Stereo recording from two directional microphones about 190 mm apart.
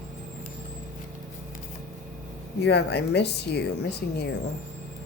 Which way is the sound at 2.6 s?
60° left (ahead or behind).